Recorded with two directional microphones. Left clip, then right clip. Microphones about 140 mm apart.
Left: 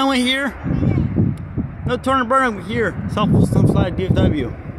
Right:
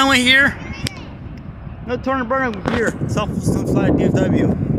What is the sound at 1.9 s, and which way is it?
Speech, 20° left (ahead or behind).